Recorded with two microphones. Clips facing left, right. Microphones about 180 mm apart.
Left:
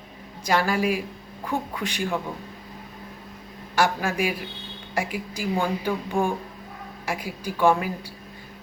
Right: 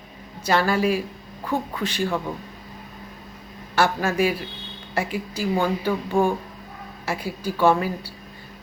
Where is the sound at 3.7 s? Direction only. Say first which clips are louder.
Right 2 dB; 15° left (ahead or behind).